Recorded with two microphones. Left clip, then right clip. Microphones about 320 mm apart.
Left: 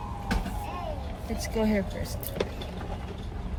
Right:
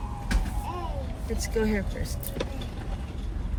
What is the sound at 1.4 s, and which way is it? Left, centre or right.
Speech, centre.